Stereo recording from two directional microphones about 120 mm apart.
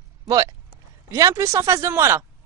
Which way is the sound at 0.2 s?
35° right (ahead or behind).